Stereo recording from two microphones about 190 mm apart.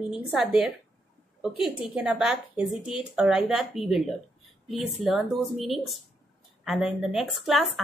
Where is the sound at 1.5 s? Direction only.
30° left (ahead or behind).